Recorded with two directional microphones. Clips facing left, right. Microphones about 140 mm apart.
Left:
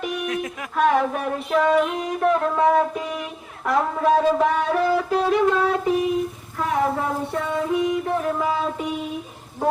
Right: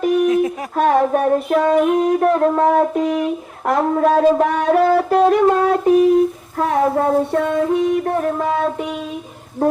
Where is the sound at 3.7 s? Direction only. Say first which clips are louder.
Right 4 dB; 55° right (ahead or behind).